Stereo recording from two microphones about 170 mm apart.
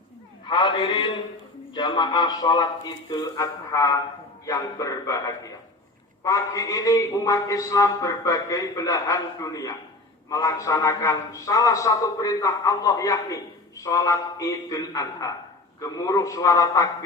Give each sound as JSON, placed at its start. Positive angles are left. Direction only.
{"t": 0.4, "sound": "a man's voice", "side_deg": 25}